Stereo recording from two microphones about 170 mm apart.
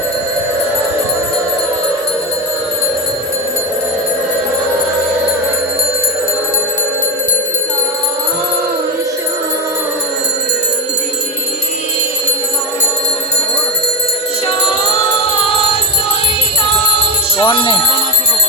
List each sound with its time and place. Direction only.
17.3 s music: 30° left (ahead or behind)